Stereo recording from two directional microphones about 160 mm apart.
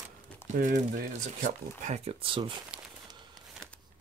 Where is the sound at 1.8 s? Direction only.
40° right (ahead or behind).